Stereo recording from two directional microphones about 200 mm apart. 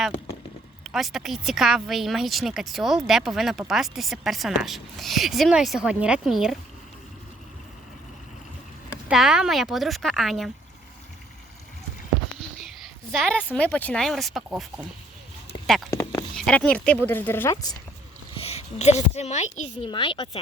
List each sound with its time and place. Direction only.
0.9 s a woman's voice: centre (ahead or behind)
9.0 s a woman's voice: 5° right (ahead or behind)
13.1 s a woman's voice: centre (ahead or behind)
15.9 s a sound: 15° left (ahead or behind)
16.3 s speech: 5° left (ahead or behind)
18.3 s a woman's voice: 30° left (ahead or behind)